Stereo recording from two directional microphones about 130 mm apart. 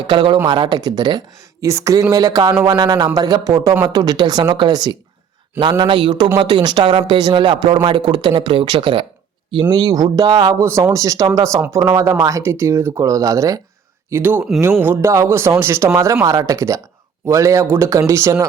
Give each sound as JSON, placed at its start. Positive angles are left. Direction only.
{"t": 0.1, "sound": "speech", "side_deg": -35}